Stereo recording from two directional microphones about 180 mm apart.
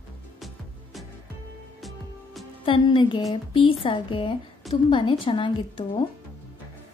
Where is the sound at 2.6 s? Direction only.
30° left (ahead or behind).